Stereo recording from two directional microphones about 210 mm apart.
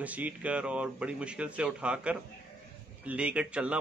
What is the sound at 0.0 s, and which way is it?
Speech, 5° right (ahead or behind).